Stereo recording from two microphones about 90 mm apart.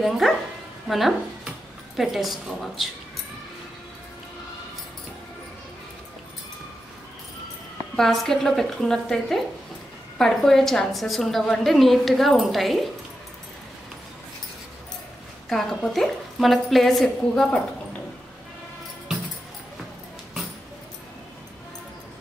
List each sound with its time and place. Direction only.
0.0 s a woman's voice: centre (ahead or behind)
7.9 s a woman's voice: 5° left (ahead or behind)
15.5 s a woman's voice: 5° left (ahead or behind)